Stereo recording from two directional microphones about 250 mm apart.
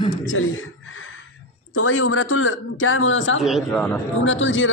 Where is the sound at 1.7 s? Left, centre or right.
Left.